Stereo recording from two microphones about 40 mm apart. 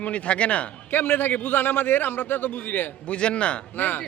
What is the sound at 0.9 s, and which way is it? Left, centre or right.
A man's voice, left.